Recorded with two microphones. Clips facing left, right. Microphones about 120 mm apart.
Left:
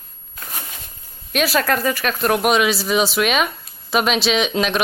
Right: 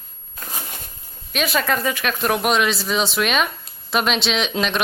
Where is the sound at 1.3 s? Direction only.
Centre (ahead or behind).